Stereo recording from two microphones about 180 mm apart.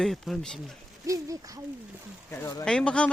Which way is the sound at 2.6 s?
5° left (ahead or behind).